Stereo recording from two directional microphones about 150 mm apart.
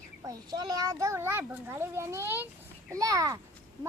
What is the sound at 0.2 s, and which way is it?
A child's voice, 25° right (ahead or behind).